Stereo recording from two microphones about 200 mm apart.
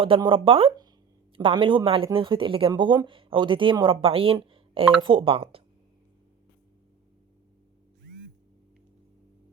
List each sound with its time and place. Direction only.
0.0 s speech: 25° right (ahead or behind)